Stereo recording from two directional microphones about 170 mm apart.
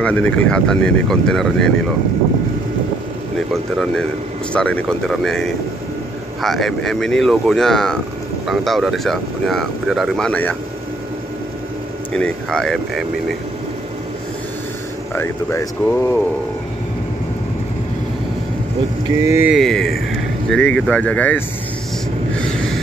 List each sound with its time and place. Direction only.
0.0 s speech: 5° left (ahead or behind)
4.5 s speech: 5° left (ahead or behind)
12.1 s speech: 5° left (ahead or behind)
15.1 s speech: 15° left (ahead or behind)
19.1 s speech: 15° right (ahead or behind)
19.5 s speech: centre (ahead or behind)